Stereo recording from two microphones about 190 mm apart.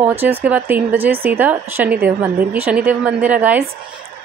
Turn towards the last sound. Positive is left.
turn(degrees=-10)  # may be behind; listen again after turning